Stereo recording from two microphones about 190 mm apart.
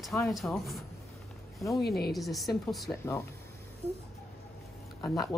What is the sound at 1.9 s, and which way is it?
Speech, 55° left (ahead or behind).